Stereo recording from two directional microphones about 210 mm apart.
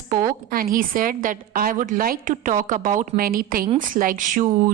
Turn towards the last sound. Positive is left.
turn(degrees=-40)  # may be behind; listen again after turning